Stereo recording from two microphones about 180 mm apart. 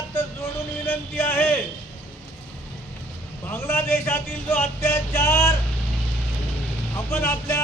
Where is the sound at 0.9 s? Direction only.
10° left (ahead or behind).